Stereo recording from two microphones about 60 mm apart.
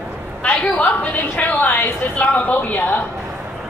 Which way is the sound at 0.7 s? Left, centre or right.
Left.